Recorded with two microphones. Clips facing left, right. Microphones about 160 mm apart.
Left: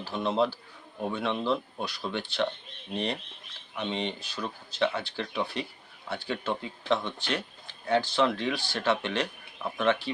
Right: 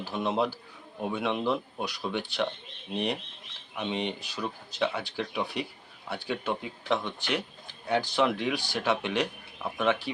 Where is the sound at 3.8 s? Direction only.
10° right (ahead or behind).